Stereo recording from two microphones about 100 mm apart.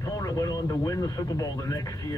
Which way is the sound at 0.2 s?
35° left (ahead or behind).